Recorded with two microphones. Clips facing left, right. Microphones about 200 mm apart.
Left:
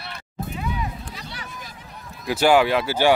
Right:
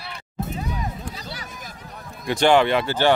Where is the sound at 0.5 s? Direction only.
40° right (ahead or behind).